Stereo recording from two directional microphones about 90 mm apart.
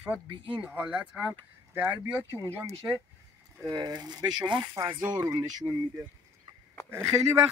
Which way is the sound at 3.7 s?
50° right (ahead or behind).